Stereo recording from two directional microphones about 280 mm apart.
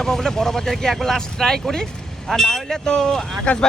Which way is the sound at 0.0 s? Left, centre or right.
Centre.